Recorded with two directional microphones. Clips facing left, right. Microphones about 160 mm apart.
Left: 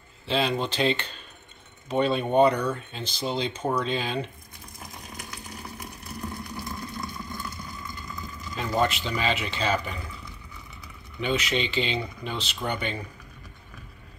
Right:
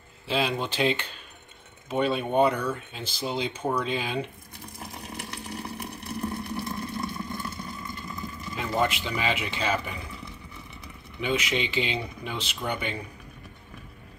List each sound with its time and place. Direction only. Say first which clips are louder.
0.3 s speech: left 1 dB; 10° right (ahead or behind)
4.7 s a sound: right 3 dB; 30° right (ahead or behind)
8.7 s speech: left 1 dB; 10° right (ahead or behind)
11.1 s speech: left 1 dB; 10° right (ahead or behind)